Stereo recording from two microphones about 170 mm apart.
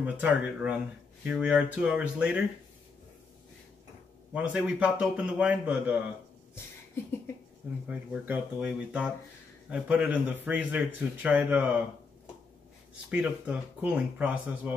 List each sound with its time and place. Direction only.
0.0 s a man's voice: 5° right (ahead or behind)
4.3 s a man's voice: 10° right (ahead or behind)
7.9 s a man's voice: 10° right (ahead or behind)
13.1 s a man's voice: 5° right (ahead or behind)